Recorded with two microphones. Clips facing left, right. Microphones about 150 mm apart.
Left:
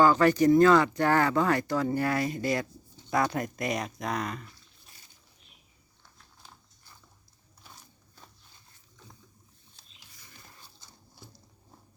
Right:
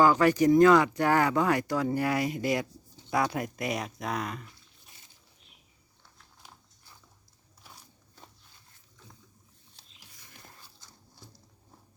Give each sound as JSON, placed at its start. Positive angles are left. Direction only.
{"t": 0.0, "sound": "speech", "side_deg": -10}
{"t": 4.4, "sound": "a sound", "side_deg": -20}
{"t": 7.6, "sound": "walk", "side_deg": -10}